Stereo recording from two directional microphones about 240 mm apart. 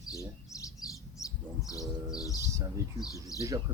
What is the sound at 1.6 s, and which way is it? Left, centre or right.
Speech, centre.